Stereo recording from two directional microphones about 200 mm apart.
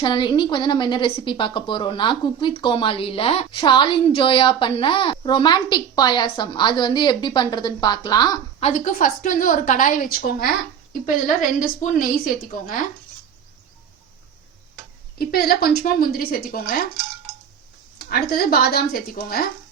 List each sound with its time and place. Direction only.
0.0 s a woman's voice: 25° left (ahead or behind)
8.7 s a woman's voice: 40° left (ahead or behind)
15.2 s a woman's voice: 50° left (ahead or behind)
17.9 s a woman's voice: 50° left (ahead or behind)